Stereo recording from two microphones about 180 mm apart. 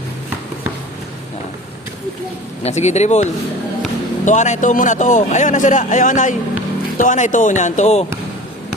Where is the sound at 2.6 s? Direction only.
40° left (ahead or behind).